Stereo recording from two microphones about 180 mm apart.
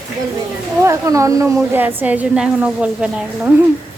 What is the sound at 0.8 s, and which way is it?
A woman's voice, 15° right (ahead or behind).